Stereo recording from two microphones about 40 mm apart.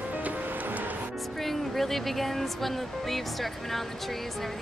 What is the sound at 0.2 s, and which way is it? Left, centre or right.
Music, right.